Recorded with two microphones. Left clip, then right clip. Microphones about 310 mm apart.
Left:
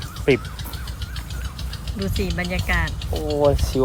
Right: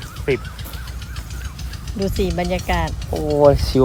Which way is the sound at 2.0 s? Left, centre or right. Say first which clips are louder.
Right 5 dB; centre.